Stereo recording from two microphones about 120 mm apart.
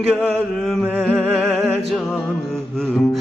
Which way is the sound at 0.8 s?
15° right (ahead or behind).